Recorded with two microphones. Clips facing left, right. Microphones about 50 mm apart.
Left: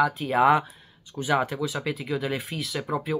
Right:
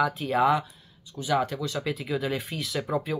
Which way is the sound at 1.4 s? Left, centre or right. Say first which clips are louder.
Left 1 dB; centre.